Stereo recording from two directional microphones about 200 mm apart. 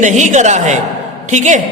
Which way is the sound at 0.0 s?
35° right (ahead or behind).